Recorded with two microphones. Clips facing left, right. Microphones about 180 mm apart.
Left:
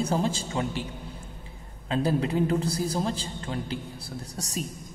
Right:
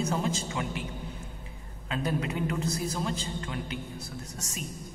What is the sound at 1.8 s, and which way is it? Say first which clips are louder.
A man's voice: left 5 dB; 30° left (ahead or behind).